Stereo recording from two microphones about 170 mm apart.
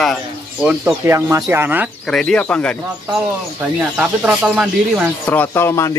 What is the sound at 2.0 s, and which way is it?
Speech, 5° left (ahead or behind).